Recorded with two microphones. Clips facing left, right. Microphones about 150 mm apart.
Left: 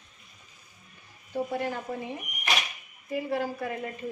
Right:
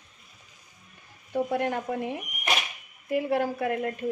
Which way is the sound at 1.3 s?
60° right (ahead or behind).